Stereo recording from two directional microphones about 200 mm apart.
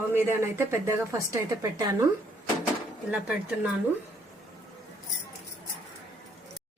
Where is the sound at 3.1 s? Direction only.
5° right (ahead or behind).